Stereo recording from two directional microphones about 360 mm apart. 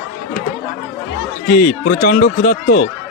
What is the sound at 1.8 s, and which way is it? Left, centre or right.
Speech, left.